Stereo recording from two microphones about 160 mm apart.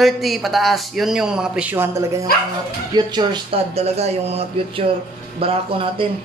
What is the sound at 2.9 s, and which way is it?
Speech, 25° right (ahead or behind).